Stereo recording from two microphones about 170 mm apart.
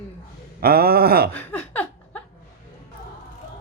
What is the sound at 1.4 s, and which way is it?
Laughter, 10° left (ahead or behind).